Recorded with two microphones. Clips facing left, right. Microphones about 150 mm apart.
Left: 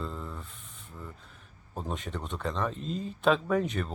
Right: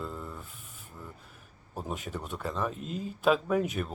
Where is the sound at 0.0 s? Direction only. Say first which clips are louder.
Left 1 dB; 5° right (ahead or behind).